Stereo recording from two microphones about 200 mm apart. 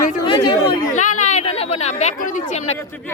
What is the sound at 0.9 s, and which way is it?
Chatter, 40° left (ahead or behind).